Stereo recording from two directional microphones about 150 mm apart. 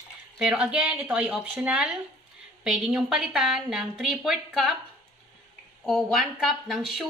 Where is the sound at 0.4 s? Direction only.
5° right (ahead or behind).